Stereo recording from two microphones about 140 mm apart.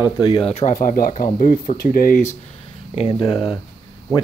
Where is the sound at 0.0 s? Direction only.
35° left (ahead or behind).